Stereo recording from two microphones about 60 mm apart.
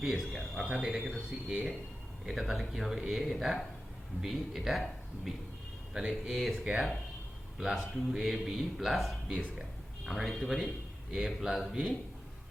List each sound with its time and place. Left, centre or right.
0.0 s a man's voice: centre
5.9 s speech: centre
6.3 s a man's voice: centre
9.3 s speech: centre
10.1 s a man's voice: centre